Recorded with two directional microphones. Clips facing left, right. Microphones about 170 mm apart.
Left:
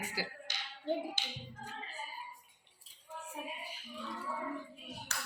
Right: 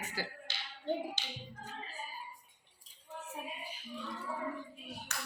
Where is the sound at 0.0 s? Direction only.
10° left (ahead or behind).